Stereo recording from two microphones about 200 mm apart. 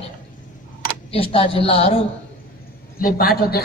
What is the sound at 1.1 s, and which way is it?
Speech, 30° left (ahead or behind).